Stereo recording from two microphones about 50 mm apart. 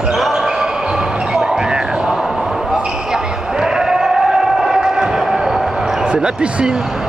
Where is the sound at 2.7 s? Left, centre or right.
Centre.